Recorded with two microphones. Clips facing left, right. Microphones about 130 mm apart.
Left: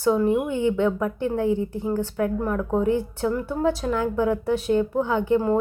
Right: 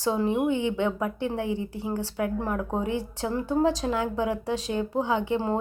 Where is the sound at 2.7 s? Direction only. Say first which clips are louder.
Left 6 dB; 15° right (ahead or behind).